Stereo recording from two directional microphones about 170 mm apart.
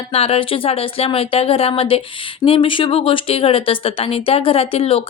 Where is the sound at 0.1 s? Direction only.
35° left (ahead or behind).